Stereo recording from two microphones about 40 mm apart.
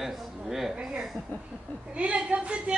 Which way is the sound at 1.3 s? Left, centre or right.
Left.